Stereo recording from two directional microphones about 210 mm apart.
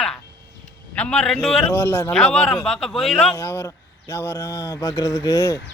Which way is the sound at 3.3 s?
15° left (ahead or behind).